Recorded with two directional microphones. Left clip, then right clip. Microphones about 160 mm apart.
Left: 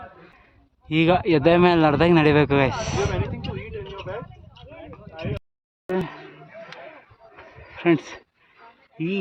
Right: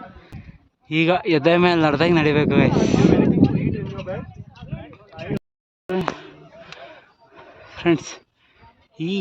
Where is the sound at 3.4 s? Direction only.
25° left (ahead or behind).